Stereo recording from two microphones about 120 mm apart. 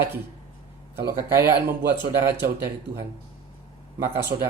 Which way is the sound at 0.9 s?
20° right (ahead or behind).